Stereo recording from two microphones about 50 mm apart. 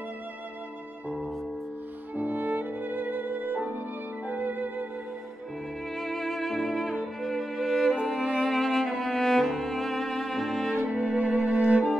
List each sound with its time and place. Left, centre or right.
2.1 s music: right
5.9 s music: centre